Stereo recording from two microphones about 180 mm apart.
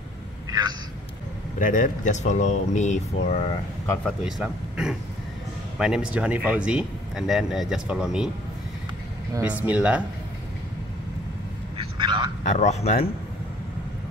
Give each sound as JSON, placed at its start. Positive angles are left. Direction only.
{"t": 0.5, "sound": "a sound", "side_deg": -20}
{"t": 1.6, "sound": "speech", "side_deg": 45}
{"t": 4.0, "sound": "speech", "side_deg": -5}
{"t": 9.4, "sound": "speech", "side_deg": -10}
{"t": 11.7, "sound": "vehicle", "side_deg": -25}
{"t": 12.4, "sound": "speech", "side_deg": 40}